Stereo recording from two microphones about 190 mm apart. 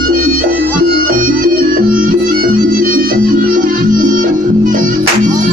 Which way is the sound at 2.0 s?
50° right (ahead or behind).